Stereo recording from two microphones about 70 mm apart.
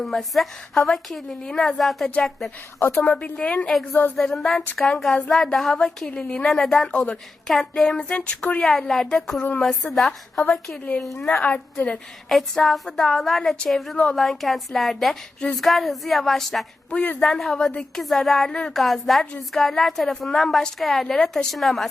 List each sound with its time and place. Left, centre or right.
0.0 s a woman's voice: centre
2.9 s a woman's voice: centre
10.4 s a woman's voice: centre
12.3 s a woman's voice: centre
13.9 s a woman's voice: centre
14.2 s a woman's voice: centre